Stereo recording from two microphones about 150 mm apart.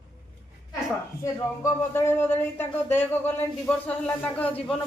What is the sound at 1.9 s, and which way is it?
Speech, 15° left (ahead or behind).